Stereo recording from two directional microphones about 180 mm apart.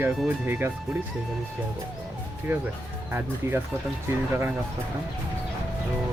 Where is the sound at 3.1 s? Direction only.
10° right (ahead or behind).